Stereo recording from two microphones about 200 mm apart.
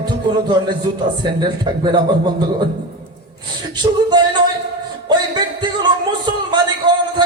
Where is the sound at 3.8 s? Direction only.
20° right (ahead or behind).